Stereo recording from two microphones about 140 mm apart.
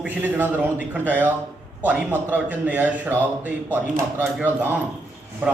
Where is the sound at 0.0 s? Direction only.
10° right (ahead or behind).